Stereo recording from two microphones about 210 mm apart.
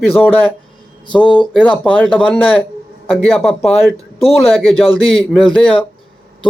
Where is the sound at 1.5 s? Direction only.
5° left (ahead or behind).